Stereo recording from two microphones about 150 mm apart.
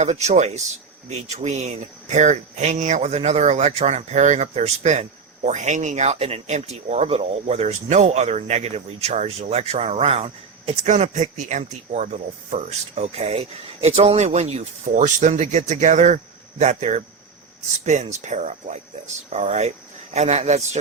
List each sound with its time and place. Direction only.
0.0 s speech: 50° right (ahead or behind)
10.9 s speech: 55° right (ahead or behind)